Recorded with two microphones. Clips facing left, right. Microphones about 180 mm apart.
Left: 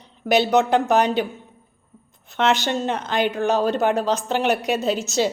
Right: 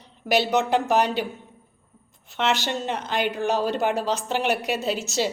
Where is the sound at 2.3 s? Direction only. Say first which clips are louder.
Left 4 dB; 45° left (ahead or behind).